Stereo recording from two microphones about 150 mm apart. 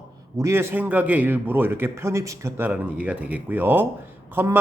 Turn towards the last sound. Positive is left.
turn(degrees=-15)  # may be behind; listen again after turning